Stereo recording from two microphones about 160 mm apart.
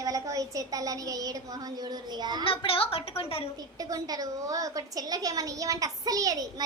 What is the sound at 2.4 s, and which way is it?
A woman's voice, 35° left (ahead or behind).